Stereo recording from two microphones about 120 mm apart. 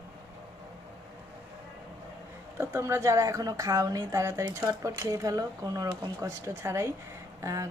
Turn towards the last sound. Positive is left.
turn(degrees=-25)  # may be behind; listen again after turning